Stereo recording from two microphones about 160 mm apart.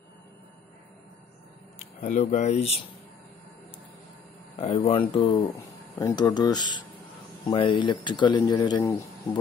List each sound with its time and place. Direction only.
2.0 s speech: 50° left (ahead or behind)
4.6 s speech: 40° left (ahead or behind); by 9.4 s 20° left (ahead or behind)